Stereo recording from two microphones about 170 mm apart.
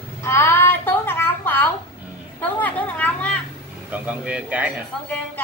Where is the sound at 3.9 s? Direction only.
10° right (ahead or behind).